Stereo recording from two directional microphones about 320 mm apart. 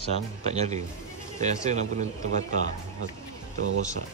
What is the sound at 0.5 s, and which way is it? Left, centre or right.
A man's voice, right.